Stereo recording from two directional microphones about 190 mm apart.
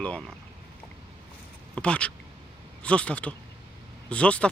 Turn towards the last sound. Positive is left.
turn(degrees=5)  # may be behind; listen again after turning